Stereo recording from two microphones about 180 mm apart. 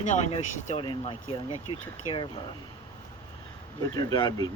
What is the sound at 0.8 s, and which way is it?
Speech, 30° left (ahead or behind).